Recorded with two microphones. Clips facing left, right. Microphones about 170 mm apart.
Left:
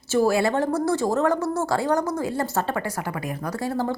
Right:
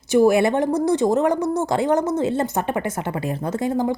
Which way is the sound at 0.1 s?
20° right (ahead or behind).